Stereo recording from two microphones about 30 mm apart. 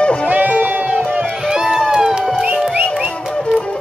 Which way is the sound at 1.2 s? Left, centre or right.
Centre.